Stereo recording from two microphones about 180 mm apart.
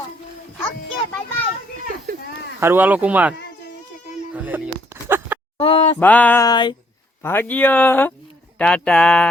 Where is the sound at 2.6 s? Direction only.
10° right (ahead or behind).